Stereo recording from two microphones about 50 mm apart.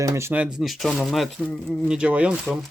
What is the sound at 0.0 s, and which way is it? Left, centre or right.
Speech, right.